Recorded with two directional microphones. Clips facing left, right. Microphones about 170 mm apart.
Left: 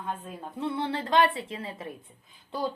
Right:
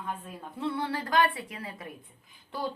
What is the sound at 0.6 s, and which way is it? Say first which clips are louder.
Speech: left 1 dB; 25° left (ahead or behind).